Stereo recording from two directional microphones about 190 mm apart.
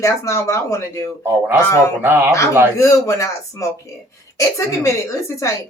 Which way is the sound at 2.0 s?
10° right (ahead or behind).